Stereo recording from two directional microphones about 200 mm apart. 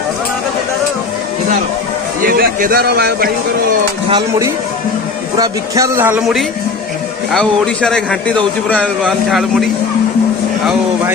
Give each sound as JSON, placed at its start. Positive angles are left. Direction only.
{"t": 2.2, "sound": "a man's voice", "side_deg": -45}
{"t": 5.4, "sound": "a man's voice", "side_deg": -15}